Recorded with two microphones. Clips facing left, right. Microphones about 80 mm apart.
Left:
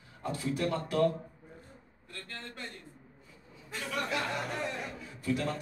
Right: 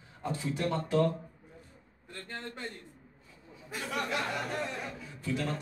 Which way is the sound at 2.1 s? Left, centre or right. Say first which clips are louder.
Right 3 dB; right.